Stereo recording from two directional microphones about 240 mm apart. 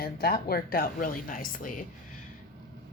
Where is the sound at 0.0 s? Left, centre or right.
Left.